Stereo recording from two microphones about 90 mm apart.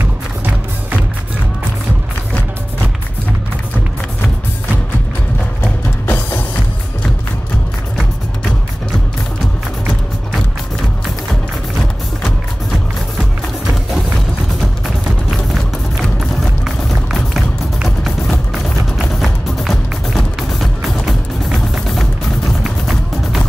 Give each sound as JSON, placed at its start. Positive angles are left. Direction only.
{"t": 5.6, "sound": "music", "side_deg": 20}
{"t": 13.9, "sound": "music", "side_deg": 0}
{"t": 16.6, "sound": "music", "side_deg": 0}
{"t": 19.2, "sound": "music", "side_deg": 5}